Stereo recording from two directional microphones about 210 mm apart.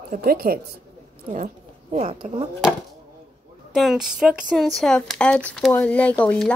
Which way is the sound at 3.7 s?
Centre (ahead or behind).